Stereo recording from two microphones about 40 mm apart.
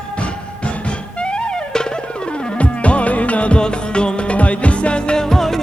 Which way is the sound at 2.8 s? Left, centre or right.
Left.